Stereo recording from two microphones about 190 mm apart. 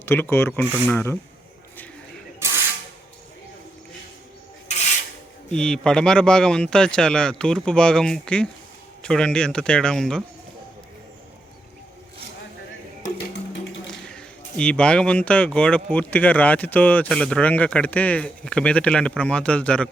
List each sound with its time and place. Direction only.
0.0 s speech: 10° left (ahead or behind)
2.4 s spray: 15° right (ahead or behind)
4.7 s filing: 35° left (ahead or behind)
5.5 s speech: 5° left (ahead or behind)
13.1 s music: 75° left (ahead or behind)
13.8 s speech: 5° left (ahead or behind)